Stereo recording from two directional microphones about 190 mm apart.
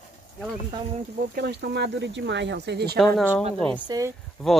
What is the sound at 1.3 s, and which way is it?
Speech, 60° right (ahead or behind).